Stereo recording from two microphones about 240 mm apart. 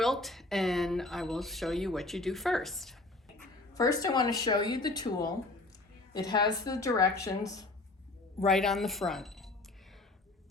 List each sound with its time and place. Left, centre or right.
0.0 s speech: centre
3.8 s a woman's voice: centre
8.4 s speech: centre